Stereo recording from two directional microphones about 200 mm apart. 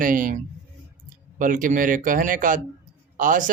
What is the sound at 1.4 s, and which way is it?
Speech, 40° right (ahead or behind).